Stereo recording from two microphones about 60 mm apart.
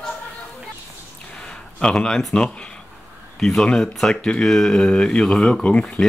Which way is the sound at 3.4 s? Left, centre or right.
Centre.